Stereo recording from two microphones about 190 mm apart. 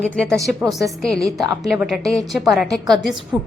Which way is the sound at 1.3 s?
20° right (ahead or behind).